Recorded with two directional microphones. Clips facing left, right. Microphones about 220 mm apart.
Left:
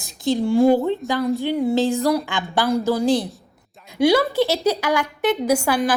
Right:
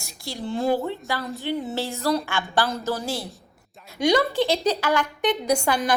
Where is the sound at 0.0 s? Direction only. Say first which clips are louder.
Left 12 dB; 15° left (ahead or behind).